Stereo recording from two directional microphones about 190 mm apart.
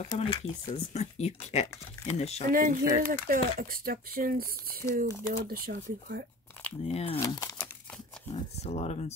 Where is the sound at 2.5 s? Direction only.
45° right (ahead or behind).